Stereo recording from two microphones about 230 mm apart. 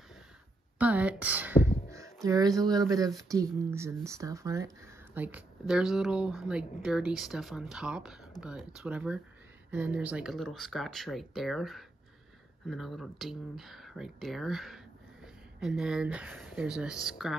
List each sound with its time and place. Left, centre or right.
0.7 s speech: centre